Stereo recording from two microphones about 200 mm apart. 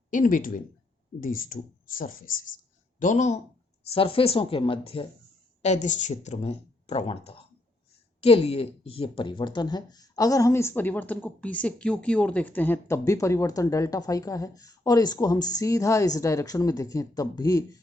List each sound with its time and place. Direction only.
0.1 s a woman's voice: 40° left (ahead or behind); by 17.7 s 20° left (ahead or behind)